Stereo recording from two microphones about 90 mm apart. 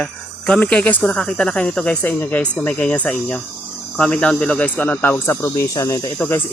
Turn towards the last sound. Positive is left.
turn(degrees=25)  # may be behind; listen again after turning